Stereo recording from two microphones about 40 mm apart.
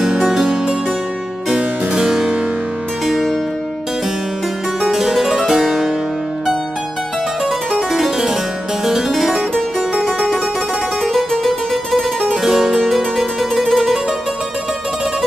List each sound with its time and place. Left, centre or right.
0.0 s music: centre
2.0 s harpsichord: centre
3.1 s harpsichord: centre
4.8 s harpsichord: centre
7.4 s harpsichord: centre
10.0 s music: centre